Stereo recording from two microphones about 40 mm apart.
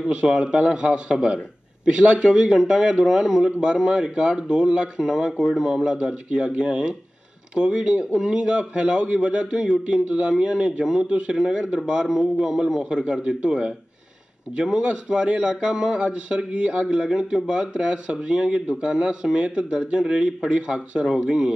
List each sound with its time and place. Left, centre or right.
0.0 s a man's voice: centre
5.8 s a man's voice: right